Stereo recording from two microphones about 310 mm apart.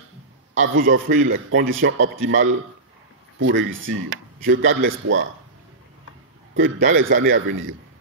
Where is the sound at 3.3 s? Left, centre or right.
Right.